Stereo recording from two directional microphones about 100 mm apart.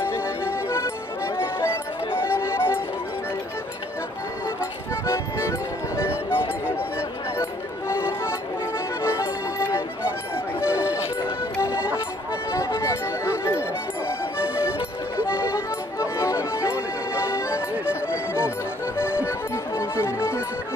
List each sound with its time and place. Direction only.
0.0 s music: 25° left (ahead or behind)
5.0 s music: 25° left (ahead or behind)